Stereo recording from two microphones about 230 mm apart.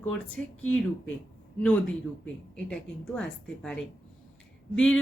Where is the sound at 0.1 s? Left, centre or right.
Centre.